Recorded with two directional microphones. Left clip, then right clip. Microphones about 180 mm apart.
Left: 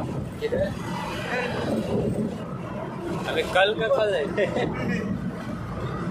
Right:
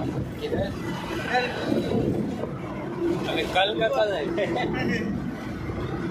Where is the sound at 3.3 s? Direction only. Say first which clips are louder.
Left 4 dB; 35° left (ahead or behind).